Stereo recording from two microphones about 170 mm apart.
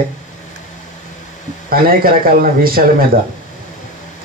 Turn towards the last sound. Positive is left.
turn(degrees=-60)  # may be behind; listen again after turning